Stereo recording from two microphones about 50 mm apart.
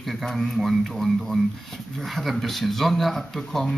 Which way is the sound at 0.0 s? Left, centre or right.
Centre.